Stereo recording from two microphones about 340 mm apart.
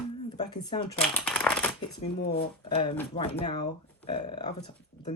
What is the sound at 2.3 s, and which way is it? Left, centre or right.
Speech, centre.